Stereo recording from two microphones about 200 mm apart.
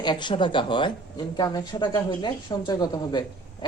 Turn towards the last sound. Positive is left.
turn(degrees=20)  # may be behind; listen again after turning